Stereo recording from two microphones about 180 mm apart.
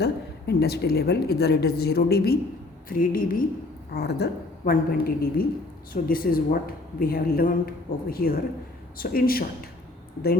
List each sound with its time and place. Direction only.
0.0 s a woman's voice: 65° left (ahead or behind)
3.9 s a woman's voice: 65° left (ahead or behind)